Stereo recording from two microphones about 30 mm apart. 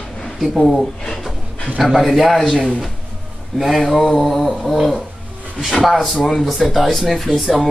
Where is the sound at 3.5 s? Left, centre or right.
Centre.